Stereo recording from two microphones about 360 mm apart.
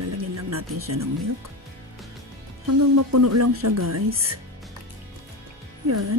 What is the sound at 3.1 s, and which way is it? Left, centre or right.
Speech, right.